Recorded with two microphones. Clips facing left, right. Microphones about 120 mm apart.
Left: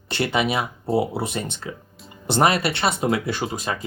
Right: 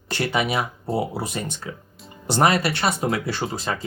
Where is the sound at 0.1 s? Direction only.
25° left (ahead or behind).